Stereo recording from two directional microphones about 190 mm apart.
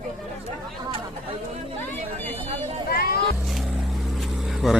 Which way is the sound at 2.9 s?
55° left (ahead or behind).